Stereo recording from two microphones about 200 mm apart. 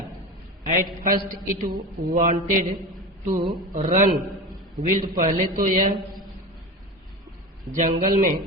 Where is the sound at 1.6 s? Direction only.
45° right (ahead or behind).